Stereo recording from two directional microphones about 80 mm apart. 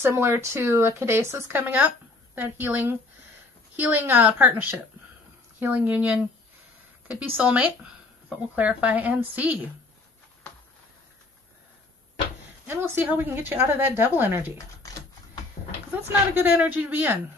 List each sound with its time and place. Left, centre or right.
0.0 s speech: right
1.8 s a sound: centre
2.4 s a woman's voice: right
12.6 s a woman's voice: right
16.5 s a woman's voice: centre